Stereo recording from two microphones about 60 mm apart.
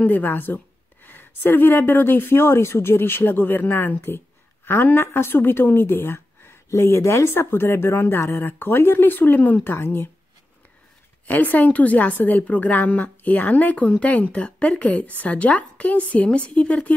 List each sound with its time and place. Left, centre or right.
0.0 s speech: left
11.2 s a woman's voice: left